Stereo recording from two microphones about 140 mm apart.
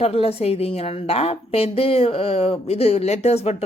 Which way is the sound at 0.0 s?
45° left (ahead or behind).